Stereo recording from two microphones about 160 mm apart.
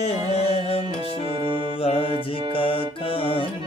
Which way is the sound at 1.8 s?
35° left (ahead or behind).